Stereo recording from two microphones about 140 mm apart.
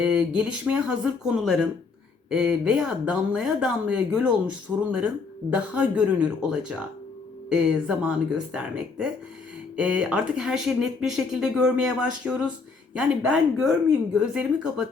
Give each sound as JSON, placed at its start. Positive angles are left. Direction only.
{"t": 0.0, "sound": "speech", "side_deg": -5}